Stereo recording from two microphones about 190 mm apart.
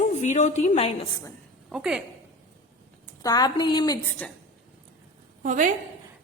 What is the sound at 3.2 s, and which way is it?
Speech, 20° left (ahead or behind).